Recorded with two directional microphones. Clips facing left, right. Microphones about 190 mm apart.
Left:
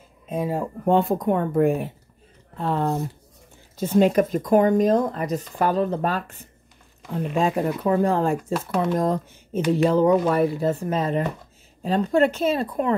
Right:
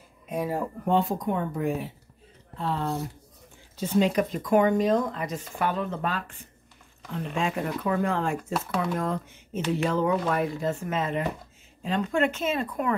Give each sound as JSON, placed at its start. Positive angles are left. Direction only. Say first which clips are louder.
{"t": 0.3, "sound": "speech", "louder": "left 3 dB", "side_deg": 20}
{"t": 0.8, "sound": "speech", "louder": "left 6 dB", "side_deg": 55}